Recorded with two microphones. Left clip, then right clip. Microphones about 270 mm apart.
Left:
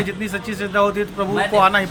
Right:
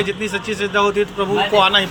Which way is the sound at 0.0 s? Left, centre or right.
Centre.